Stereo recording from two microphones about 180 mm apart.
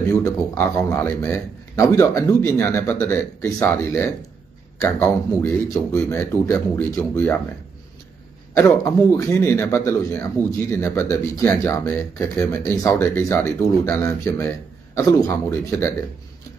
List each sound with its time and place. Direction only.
0.2 s a man's voice: 15° left (ahead or behind)
8.6 s a man's voice: 15° left (ahead or behind)